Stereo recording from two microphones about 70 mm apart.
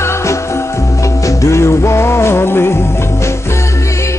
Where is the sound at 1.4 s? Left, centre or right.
Left.